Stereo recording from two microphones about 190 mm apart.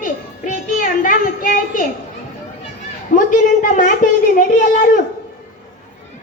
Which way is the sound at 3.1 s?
45° left (ahead or behind).